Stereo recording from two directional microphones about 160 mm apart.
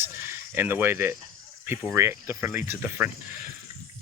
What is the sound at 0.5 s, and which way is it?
Speech, 10° right (ahead or behind).